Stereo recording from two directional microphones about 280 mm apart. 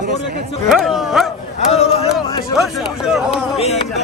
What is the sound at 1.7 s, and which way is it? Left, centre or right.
Speech, left.